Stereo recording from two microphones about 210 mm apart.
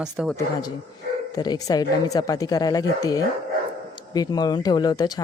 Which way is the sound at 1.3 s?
20° left (ahead or behind).